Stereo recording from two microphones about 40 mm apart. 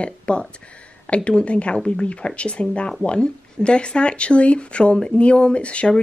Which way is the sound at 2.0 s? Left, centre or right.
Left.